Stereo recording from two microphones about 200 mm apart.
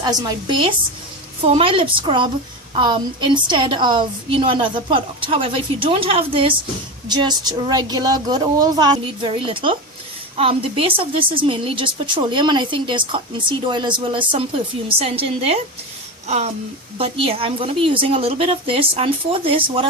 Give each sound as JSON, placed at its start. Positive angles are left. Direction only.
{"t": 0.0, "sound": "a woman's voice", "side_deg": -20}
{"t": 17.0, "sound": "a woman's voice", "side_deg": -30}